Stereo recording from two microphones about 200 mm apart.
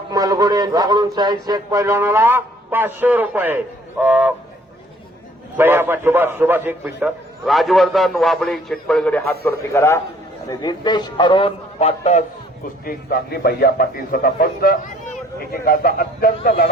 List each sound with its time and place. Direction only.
0.1 s speech: 20° right (ahead or behind)
5.5 s a man's voice: 10° right (ahead or behind); by 12.2 s 35° left (ahead or behind)
12.8 s a man's voice: 50° left (ahead or behind)